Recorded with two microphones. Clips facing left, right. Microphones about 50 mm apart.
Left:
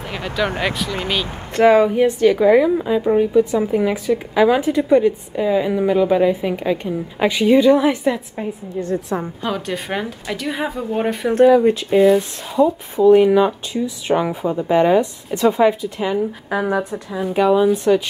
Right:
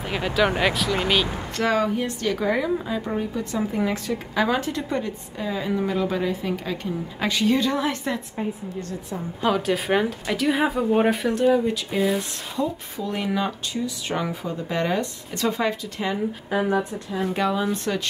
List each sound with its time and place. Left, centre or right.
0.1 s speech: centre
1.6 s a woman's voice: left
2.4 s a woman's voice: centre
9.4 s speech: centre
11.2 s a woman's voice: centre
16.4 s a woman's voice: left
17.1 s a woman's voice: centre